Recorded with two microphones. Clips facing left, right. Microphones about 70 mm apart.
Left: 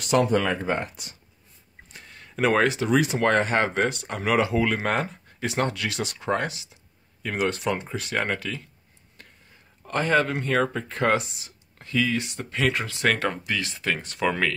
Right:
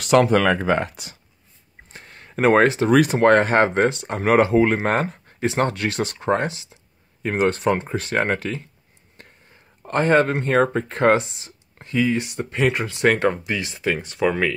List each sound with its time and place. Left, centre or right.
0.0 s speech: right
1.9 s a sound: right
2.9 s speech: right
3.9 s speech: right
4.2 s speech: right
9.8 s speech: right; by 14.5 s centre